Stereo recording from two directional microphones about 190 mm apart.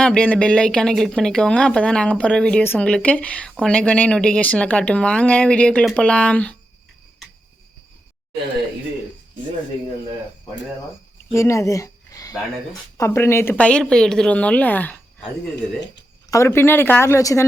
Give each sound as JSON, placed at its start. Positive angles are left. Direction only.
{"t": 0.0, "sound": "speech", "side_deg": 5}
{"t": 11.3, "sound": "a woman's voice", "side_deg": 15}
{"t": 15.5, "sound": "speech", "side_deg": 65}
{"t": 16.3, "sound": "a woman's voice", "side_deg": 15}